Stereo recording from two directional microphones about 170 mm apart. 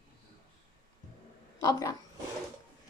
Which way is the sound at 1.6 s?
20° left (ahead or behind).